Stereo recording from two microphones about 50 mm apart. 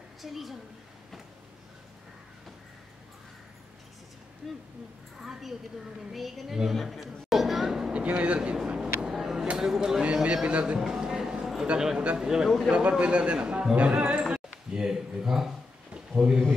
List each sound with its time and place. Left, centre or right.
0.2 s a woman's voice: centre
4.4 s a woman's voice: centre
6.8 s a sound: centre
7.9 s speech: right
9.1 s a sound: centre
9.6 s speech: centre
10.2 s a man's voice: right
10.8 s a sound: centre
11.6 s a man's voice: centre
12.4 s a woman's voice: centre
12.9 s a man's voice: right
15.9 s a sound: right